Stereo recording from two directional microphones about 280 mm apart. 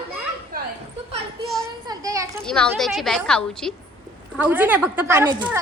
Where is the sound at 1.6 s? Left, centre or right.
Centre.